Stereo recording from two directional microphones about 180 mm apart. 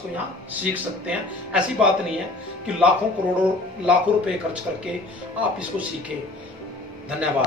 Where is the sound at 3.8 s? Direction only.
5° right (ahead or behind).